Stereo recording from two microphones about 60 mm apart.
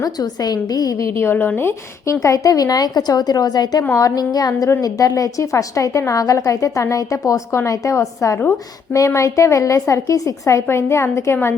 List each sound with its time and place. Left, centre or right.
0.0 s a woman's voice: left
1.2 s speech: left
2.0 s a woman's voice: left